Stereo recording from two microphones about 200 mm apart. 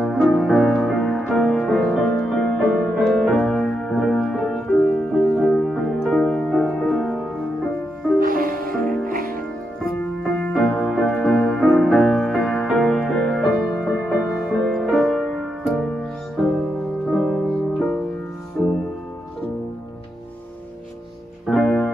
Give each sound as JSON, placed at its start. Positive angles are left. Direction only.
{"t": 0.0, "sound": "music", "side_deg": 0}
{"t": 8.2, "sound": "music", "side_deg": -45}
{"t": 8.7, "sound": "music", "side_deg": 5}
{"t": 9.0, "sound": "music", "side_deg": -45}
{"t": 10.4, "sound": "music", "side_deg": 5}
{"t": 17.1, "sound": "music", "side_deg": 0}
{"t": 21.5, "sound": "music", "side_deg": 0}